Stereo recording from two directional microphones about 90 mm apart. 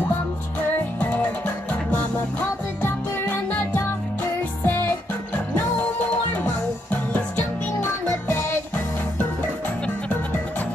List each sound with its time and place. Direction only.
0.9 s music: 15° left (ahead or behind)